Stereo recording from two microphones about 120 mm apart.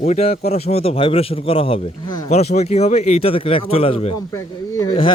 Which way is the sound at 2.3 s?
65° left (ahead or behind).